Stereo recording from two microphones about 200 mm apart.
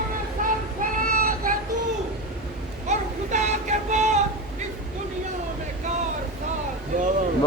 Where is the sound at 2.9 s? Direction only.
35° right (ahead or behind).